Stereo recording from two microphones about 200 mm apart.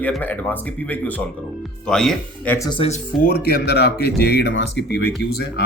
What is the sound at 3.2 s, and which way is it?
Speech, 50° left (ahead or behind).